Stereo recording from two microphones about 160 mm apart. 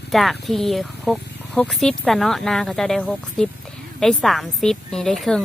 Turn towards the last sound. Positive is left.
turn(degrees=0)  # may be behind; listen again after turning